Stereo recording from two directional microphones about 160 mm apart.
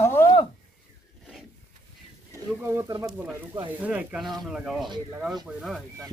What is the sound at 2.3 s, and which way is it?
Speech, 15° right (ahead or behind).